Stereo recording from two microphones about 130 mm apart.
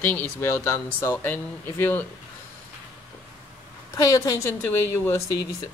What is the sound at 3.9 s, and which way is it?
A woman's voice, 25° left (ahead or behind).